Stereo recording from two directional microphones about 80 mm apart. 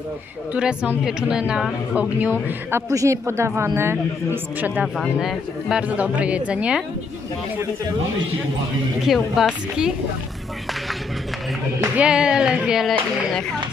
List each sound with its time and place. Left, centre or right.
0.6 s a woman's voice: centre
2.9 s a woman's voice: right
5.2 s speech: centre
5.9 s a woman's voice: centre
9.0 s speech: centre
12.0 s a woman's voice: centre